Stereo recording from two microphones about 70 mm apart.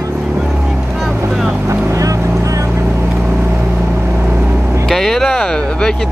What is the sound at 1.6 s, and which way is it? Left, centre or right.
Boat, right.